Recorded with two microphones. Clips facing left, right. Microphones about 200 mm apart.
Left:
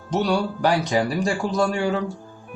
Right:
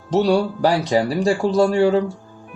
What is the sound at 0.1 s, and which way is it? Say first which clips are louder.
Speech: right 5 dB; 30° right (ahead or behind).